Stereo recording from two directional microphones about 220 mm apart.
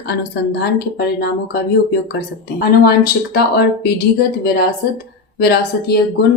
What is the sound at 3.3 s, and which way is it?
Speech, 45° left (ahead or behind).